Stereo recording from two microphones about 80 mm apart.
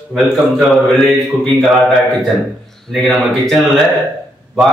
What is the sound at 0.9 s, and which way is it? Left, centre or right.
Speech, centre.